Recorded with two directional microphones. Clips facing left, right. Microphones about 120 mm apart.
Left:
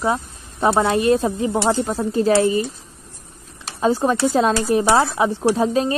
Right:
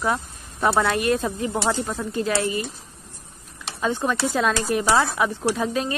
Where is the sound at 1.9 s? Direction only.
35° left (ahead or behind).